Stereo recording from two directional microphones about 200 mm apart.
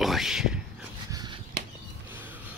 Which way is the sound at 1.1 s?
20° right (ahead or behind).